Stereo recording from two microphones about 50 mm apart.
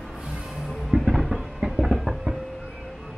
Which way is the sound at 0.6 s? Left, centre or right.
Centre.